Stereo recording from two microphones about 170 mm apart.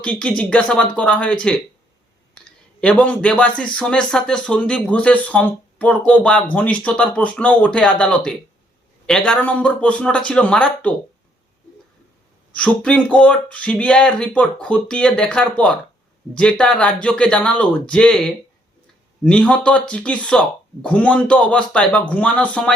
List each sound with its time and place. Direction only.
0.0 s speech: 5° left (ahead or behind)
2.8 s speech: 5° left (ahead or behind)
12.5 s speech: 5° left (ahead or behind)